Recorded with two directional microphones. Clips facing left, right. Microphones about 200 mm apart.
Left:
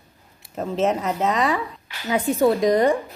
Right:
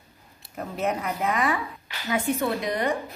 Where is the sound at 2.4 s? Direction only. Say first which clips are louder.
Left 9 dB; 40° left (ahead or behind).